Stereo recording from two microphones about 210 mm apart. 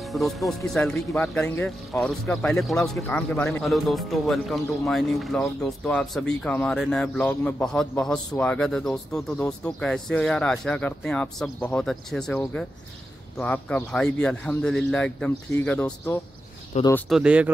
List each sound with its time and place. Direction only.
0.0 s speech: centre (ahead or behind)
16.7 s speech: 30° left (ahead or behind)
17.1 s speech: 5° right (ahead or behind)